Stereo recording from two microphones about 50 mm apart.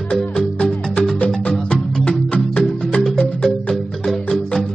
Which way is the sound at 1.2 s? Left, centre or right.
Left.